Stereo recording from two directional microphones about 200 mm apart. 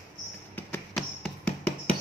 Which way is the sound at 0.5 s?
5° left (ahead or behind).